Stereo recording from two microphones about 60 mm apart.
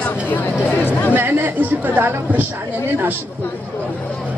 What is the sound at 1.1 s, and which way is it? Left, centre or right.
A woman's voice, right.